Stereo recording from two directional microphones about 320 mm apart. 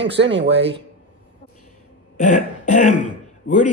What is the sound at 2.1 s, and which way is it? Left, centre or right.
Throat clearing, left.